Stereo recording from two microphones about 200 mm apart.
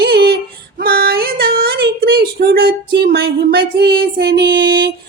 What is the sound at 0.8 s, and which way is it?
Female singing, 50° right (ahead or behind).